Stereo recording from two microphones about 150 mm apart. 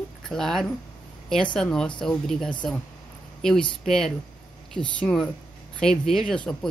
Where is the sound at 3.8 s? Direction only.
5° left (ahead or behind).